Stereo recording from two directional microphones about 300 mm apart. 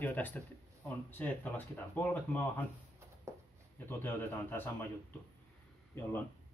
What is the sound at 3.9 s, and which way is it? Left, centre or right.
Speech, centre.